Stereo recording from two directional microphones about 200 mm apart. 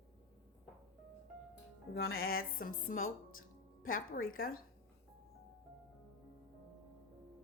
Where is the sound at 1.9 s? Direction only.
55° left (ahead or behind).